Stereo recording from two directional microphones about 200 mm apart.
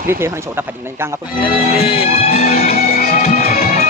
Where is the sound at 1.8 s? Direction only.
30° left (ahead or behind).